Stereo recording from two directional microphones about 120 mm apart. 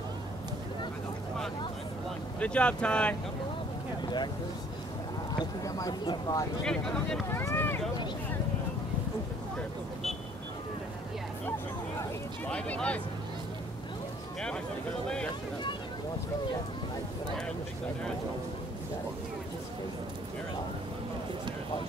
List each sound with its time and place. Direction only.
2.4 s speech: 10° left (ahead or behind)
5.4 s speech: 30° left (ahead or behind)
6.6 s speech: 5° left (ahead or behind)
7.2 s speech: 20° left (ahead or behind)
12.4 s speech: 10° left (ahead or behind)